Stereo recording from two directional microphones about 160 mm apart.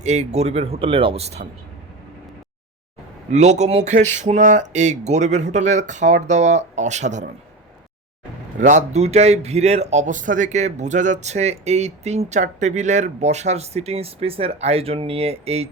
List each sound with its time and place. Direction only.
0.0 s speech: 45° right (ahead or behind)
3.2 s a man's voice: 45° right (ahead or behind)
8.5 s a man's voice: 50° right (ahead or behind)